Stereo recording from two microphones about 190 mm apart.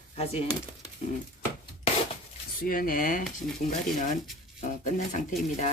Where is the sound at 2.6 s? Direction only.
50° left (ahead or behind).